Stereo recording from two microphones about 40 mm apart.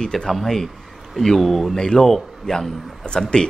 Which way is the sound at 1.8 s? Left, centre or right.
Centre.